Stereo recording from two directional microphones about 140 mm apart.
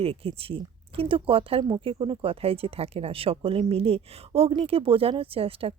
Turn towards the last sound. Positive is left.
turn(degrees=-45)  # may be behind; listen again after turning